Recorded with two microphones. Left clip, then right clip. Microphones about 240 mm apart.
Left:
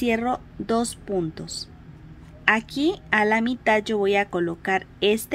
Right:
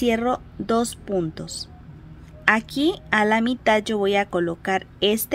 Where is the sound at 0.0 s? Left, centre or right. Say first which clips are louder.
Right 2 dB; centre.